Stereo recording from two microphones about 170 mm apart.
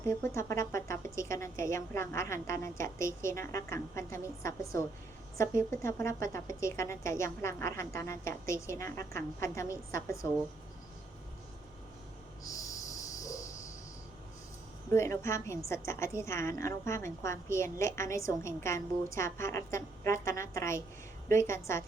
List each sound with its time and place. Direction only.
0.0 s a woman's voice: 15° left (ahead or behind)
12.4 s a sound: 20° left (ahead or behind)
14.9 s a woman's voice: 15° left (ahead or behind)